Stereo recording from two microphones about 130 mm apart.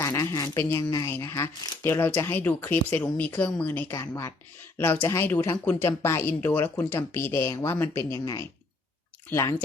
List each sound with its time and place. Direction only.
0.0 s speech: 25° left (ahead or behind)